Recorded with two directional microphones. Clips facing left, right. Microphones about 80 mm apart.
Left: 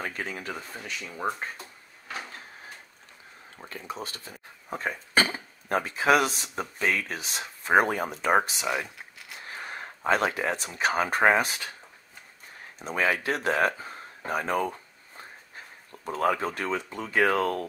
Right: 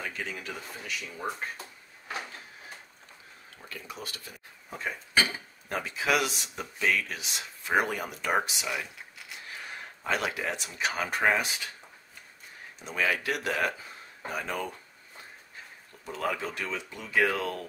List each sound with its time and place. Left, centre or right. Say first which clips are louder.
0.0 s speech: left 3 dB; left
3.5 s speech: left 5 dB; left
4.6 s speech: left 4 dB; left
12.7 s speech: left 3 dB; left
16.1 s speech: left 6 dB; left